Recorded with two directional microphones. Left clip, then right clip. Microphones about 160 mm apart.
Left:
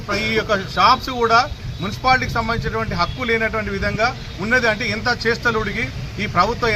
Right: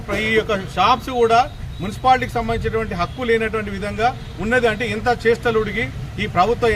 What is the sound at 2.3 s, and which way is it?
A man's voice, 10° right (ahead or behind).